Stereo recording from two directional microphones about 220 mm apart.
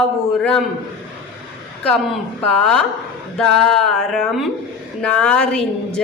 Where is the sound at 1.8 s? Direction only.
Centre (ahead or behind).